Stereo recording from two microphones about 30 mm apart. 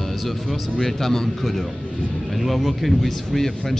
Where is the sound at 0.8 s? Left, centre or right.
Centre.